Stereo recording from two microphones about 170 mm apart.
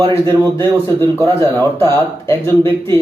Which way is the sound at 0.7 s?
15° left (ahead or behind).